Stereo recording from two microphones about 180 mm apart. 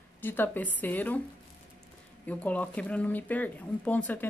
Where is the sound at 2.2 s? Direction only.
10° left (ahead or behind).